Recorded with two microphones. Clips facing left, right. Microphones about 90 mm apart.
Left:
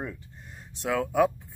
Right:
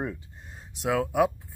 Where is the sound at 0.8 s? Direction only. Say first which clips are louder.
Even; 10° right (ahead or behind).